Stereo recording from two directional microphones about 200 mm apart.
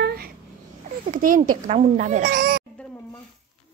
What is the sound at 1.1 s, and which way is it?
A child's voice, 40° right (ahead or behind).